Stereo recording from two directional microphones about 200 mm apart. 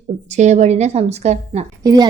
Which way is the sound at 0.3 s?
35° right (ahead or behind).